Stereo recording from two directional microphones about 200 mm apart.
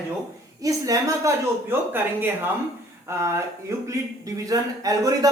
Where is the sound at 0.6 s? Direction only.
15° right (ahead or behind).